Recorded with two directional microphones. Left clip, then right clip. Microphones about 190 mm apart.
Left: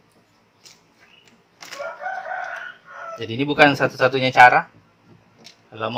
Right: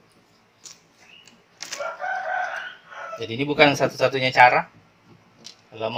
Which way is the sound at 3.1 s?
40° left (ahead or behind).